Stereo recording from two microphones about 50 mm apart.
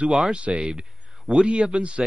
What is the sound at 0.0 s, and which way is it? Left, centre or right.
Speech, centre.